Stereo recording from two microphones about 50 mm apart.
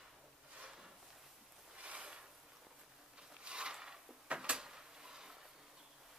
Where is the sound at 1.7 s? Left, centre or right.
Right.